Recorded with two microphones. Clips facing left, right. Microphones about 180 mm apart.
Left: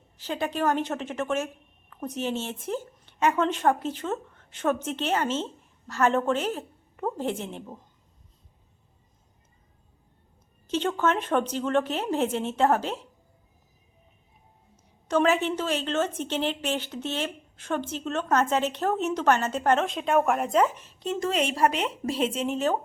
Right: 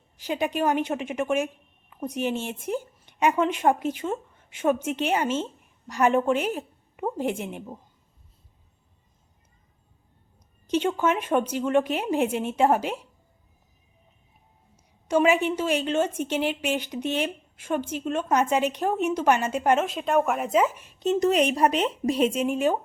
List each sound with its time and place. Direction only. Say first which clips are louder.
0.2 s a woman's voice: right 2 dB; 15° right (ahead or behind)
10.7 s a woman's voice: right 2 dB; 10° right (ahead or behind)
15.0 s a woman's voice: right 2 dB; 10° right (ahead or behind)
21.0 s speech: right 6 dB; 20° right (ahead or behind)